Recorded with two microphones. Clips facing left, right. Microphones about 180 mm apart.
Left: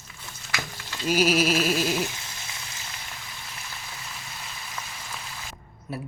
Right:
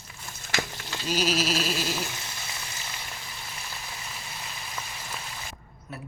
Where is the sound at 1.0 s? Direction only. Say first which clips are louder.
Left 5 dB; 10° left (ahead or behind).